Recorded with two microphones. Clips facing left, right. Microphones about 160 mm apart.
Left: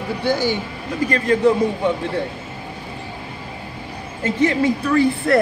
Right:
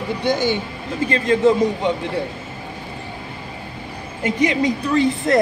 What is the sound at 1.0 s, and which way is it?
Speech, 20° right (ahead or behind).